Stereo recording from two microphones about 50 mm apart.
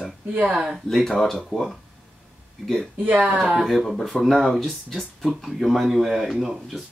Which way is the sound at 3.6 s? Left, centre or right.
Centre.